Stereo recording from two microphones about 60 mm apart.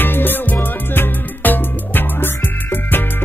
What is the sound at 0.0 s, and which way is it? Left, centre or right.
Music, left.